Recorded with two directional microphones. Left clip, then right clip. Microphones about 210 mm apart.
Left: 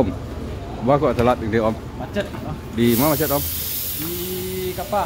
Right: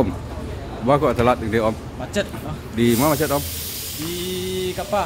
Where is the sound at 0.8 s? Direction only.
Centre (ahead or behind).